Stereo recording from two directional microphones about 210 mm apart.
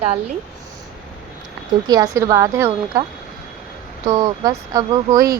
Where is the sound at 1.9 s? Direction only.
15° right (ahead or behind).